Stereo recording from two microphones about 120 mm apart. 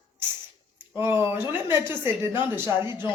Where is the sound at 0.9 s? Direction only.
20° right (ahead or behind).